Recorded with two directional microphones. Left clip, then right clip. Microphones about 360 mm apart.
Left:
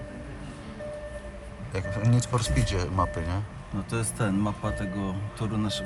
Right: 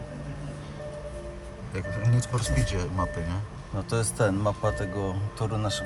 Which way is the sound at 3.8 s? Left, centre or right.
Right.